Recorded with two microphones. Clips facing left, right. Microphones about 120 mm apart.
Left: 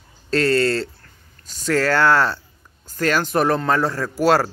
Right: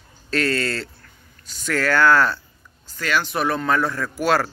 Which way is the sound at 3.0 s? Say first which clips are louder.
Left 4 dB; 40° left (ahead or behind).